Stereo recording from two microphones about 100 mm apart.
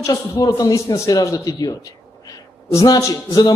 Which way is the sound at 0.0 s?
30° left (ahead or behind).